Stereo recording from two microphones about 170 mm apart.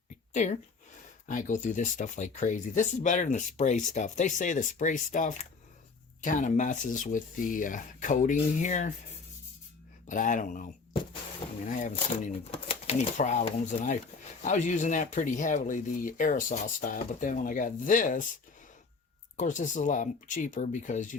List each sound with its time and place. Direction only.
0.3 s speech: 45° left (ahead or behind)
10.1 s speech: 50° left (ahead or behind)
11.7 s speech: 50° left (ahead or behind)
12.5 s speech: 35° left (ahead or behind)
19.4 s speech: 45° left (ahead or behind)